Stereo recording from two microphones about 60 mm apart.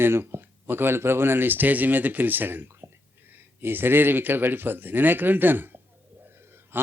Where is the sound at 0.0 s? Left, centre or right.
Right.